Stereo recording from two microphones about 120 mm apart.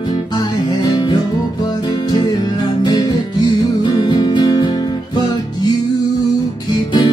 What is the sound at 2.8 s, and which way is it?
Music, 35° left (ahead or behind).